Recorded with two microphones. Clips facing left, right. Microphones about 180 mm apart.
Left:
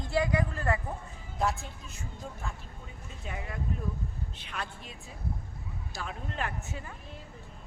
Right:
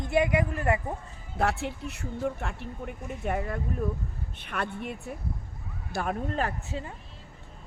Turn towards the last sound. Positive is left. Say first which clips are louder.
# right 5 dB
turn(degrees=-30)  # may be behind; listen again after turning